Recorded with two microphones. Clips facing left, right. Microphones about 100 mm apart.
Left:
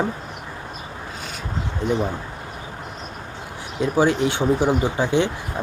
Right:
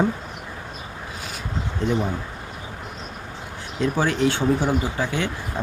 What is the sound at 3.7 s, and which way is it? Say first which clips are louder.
Speech: left 3 dB; 15° left (ahead or behind).